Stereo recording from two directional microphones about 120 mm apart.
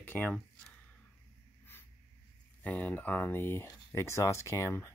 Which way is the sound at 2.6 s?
15° left (ahead or behind).